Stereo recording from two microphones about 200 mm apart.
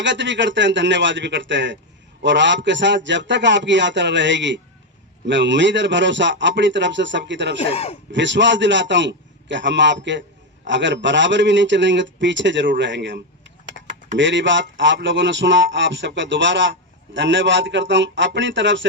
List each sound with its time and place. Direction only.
0.0 s speech: 65° right (ahead or behind)
7.6 s speech: 30° left (ahead or behind)
8.1 s speech: 65° right (ahead or behind)